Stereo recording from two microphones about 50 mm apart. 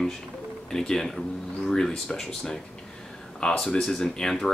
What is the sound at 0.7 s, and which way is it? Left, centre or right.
Speech, centre.